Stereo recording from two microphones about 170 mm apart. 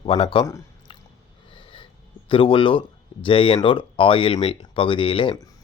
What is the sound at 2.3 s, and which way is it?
Speech, 30° left (ahead or behind).